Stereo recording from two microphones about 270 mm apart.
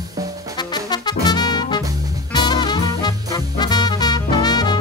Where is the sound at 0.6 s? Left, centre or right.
Centre.